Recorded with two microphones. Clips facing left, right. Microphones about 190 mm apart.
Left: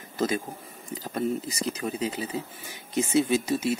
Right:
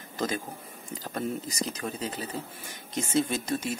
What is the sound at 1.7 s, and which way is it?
Speech, 10° left (ahead or behind).